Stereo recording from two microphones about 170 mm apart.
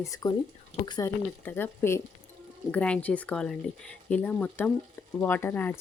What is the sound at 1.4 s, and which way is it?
Speech, 10° left (ahead or behind).